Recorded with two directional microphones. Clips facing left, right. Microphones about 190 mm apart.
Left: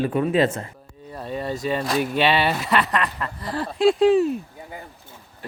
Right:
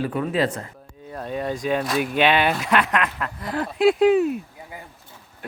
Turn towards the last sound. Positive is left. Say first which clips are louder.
# even
turn(degrees=-5)  # may be behind; listen again after turning